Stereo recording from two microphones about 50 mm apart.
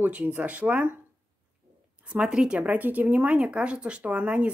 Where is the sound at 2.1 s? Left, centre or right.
Centre.